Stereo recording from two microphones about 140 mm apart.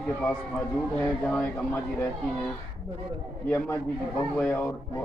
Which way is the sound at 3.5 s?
15° left (ahead or behind).